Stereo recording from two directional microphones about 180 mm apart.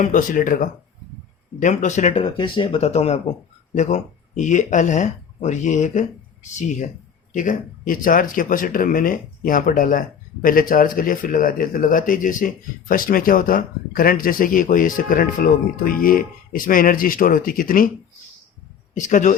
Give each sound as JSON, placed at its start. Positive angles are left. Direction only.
{"t": 0.0, "sound": "speech", "side_deg": 45}
{"t": 2.2, "sound": "speech", "side_deg": 25}
{"t": 18.9, "sound": "speech", "side_deg": 45}